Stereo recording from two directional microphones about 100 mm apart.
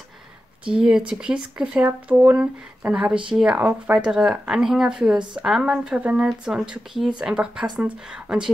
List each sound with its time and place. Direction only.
0.7 s speech: 10° right (ahead or behind)
2.9 s speech: 5° right (ahead or behind)